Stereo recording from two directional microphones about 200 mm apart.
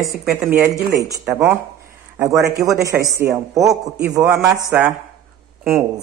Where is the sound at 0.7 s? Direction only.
15° right (ahead or behind).